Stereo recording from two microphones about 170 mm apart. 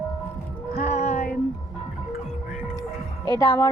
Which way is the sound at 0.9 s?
40° left (ahead or behind).